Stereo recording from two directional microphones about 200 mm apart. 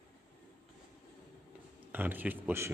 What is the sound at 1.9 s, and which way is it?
Speech, 10° right (ahead or behind).